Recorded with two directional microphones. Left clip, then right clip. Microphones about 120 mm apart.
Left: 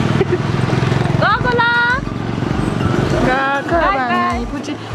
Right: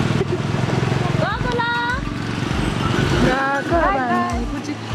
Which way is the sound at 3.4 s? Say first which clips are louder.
Left 3 dB; 20° left (ahead or behind).